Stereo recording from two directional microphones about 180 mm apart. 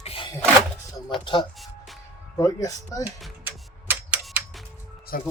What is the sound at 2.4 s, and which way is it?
Speech, 20° left (ahead or behind).